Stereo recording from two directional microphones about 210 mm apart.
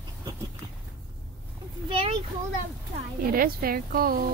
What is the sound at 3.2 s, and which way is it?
Speech, 45° right (ahead or behind).